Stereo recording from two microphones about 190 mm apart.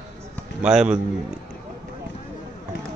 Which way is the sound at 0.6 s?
5° right (ahead or behind).